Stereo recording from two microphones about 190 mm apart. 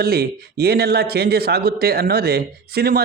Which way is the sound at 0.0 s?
55° right (ahead or behind).